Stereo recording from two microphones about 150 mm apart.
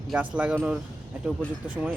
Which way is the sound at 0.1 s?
10° right (ahead or behind).